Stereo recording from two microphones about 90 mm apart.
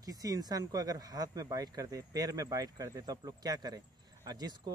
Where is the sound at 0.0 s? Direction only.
45° right (ahead or behind).